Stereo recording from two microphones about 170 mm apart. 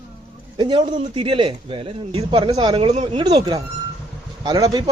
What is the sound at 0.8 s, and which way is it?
Speech, 45° right (ahead or behind).